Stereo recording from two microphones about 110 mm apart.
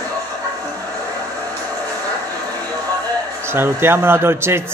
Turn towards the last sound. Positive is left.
turn(degrees=-20)  # may be behind; listen again after turning